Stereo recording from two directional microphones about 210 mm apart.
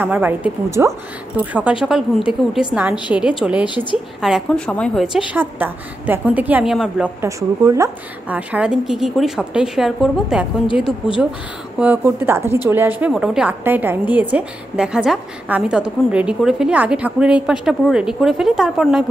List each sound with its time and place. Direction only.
0.0 s a woman's voice: 10° right (ahead or behind)
3.6 s a woman's voice: 20° left (ahead or behind)
4.2 s a woman's voice: centre (ahead or behind)